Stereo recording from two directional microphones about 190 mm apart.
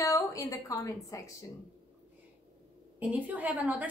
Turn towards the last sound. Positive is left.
turn(degrees=-10)  # may be behind; listen again after turning